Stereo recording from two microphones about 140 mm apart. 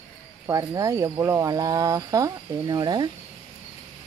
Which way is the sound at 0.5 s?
25° right (ahead or behind).